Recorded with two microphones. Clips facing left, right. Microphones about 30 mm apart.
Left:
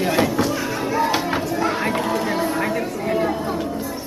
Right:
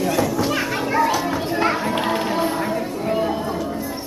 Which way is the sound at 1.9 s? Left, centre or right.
Right.